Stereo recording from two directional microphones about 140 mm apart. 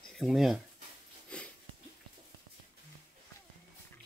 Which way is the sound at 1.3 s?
10° left (ahead or behind).